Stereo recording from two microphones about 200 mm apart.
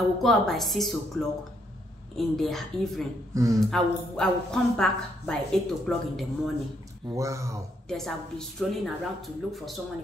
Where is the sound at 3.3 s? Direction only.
15° right (ahead or behind).